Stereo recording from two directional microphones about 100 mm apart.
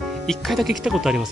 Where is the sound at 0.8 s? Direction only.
5° right (ahead or behind).